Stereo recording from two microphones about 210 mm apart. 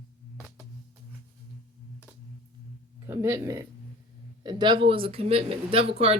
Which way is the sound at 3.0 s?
10° right (ahead or behind).